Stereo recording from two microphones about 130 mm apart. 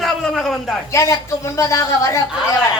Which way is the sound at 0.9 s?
25° left (ahead or behind).